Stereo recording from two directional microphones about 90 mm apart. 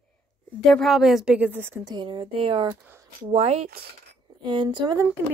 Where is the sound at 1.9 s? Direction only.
60° right (ahead or behind); by 2.7 s 90° right.